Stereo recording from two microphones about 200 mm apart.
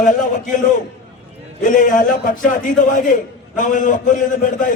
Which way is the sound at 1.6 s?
40° left (ahead or behind).